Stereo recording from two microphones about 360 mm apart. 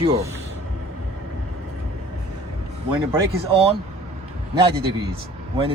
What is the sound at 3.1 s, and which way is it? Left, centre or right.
Speech, centre.